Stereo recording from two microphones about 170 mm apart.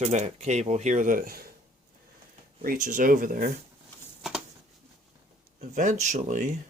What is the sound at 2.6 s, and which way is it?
Speech, 55° right (ahead or behind).